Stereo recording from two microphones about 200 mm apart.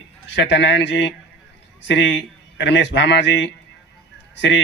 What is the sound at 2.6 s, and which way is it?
Speech, 60° left (ahead or behind).